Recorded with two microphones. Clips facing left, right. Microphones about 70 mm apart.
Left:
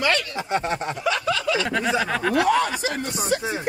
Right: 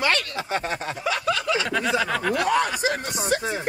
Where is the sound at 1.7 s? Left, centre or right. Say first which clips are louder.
Left 1 dB; centre.